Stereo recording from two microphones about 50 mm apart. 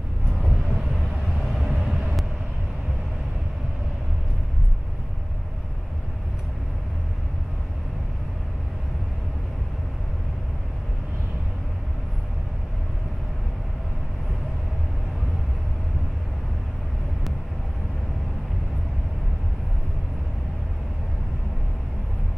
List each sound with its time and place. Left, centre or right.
1.7 s vehicle: centre